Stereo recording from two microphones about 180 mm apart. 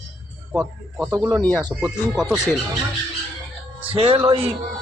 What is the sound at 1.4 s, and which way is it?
Speech, 10° left (ahead or behind).